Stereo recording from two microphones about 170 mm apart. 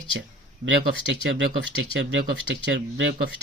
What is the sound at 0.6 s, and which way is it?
Speech, 50° right (ahead or behind).